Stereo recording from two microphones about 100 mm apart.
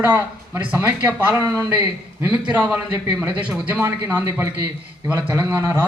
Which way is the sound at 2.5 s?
15° right (ahead or behind).